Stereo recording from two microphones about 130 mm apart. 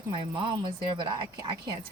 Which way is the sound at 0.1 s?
40° right (ahead or behind).